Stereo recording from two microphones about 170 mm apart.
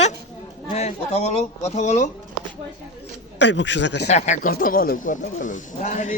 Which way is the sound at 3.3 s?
90° left.